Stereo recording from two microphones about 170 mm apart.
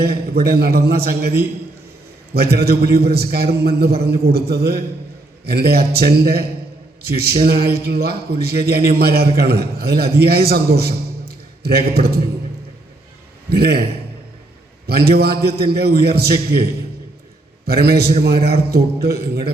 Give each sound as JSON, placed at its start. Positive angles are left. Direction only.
{"t": 0.0, "sound": "a man's voice", "side_deg": -65}
{"t": 13.5, "sound": "a man's voice", "side_deg": -70}
{"t": 14.8, "sound": "a man's voice", "side_deg": -70}
{"t": 17.7, "sound": "a man's voice", "side_deg": -65}